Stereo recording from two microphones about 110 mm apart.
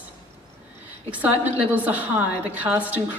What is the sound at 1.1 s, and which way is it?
A woman's voice, 15° right (ahead or behind).